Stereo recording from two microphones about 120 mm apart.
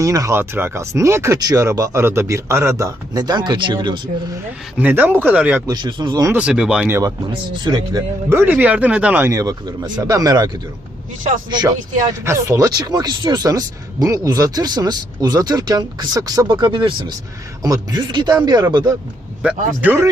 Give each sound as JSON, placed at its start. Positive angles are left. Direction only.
{"t": 0.0, "sound": "speech", "side_deg": -25}
{"t": 4.8, "sound": "speech", "side_deg": -15}
{"t": 5.6, "sound": "speech", "side_deg": -35}
{"t": 6.3, "sound": "speech", "side_deg": -10}
{"t": 7.6, "sound": "speech", "side_deg": -35}
{"t": 8.3, "sound": "speech", "side_deg": -20}
{"t": 9.3, "sound": "speech", "side_deg": -30}
{"t": 11.5, "sound": "speech", "side_deg": -30}
{"t": 16.5, "sound": "speech", "side_deg": -45}
{"t": 17.6, "sound": "speech", "side_deg": -35}
{"t": 19.4, "sound": "speech", "side_deg": -10}